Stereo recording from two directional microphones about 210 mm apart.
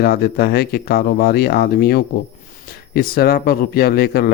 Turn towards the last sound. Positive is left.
turn(degrees=45)  # may be behind; listen again after turning